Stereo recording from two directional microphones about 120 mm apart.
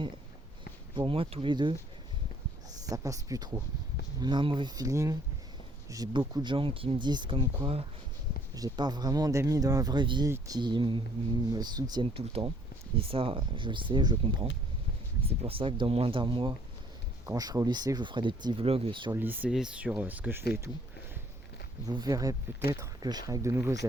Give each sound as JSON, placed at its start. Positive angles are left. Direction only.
{"t": 0.9, "sound": "speech", "side_deg": -45}
{"t": 2.9, "sound": "speech", "side_deg": -30}
{"t": 4.2, "sound": "speech", "side_deg": -40}
{"t": 6.1, "sound": "speech", "side_deg": -40}
{"t": 8.5, "sound": "speech", "side_deg": -35}
{"t": 10.2, "sound": "speech", "side_deg": -25}
{"t": 10.6, "sound": "speech", "side_deg": -40}
{"t": 12.1, "sound": "speech", "side_deg": -55}
{"t": 15.3, "sound": "speech", "side_deg": -50}
{"t": 17.2, "sound": "speech", "side_deg": -30}
{"t": 19.1, "sound": "speech", "side_deg": -15}
{"t": 19.5, "sound": "speech", "side_deg": -5}
{"t": 21.8, "sound": "speech", "side_deg": -30}